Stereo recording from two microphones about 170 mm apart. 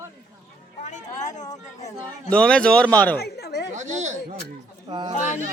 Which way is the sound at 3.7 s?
45° right (ahead or behind).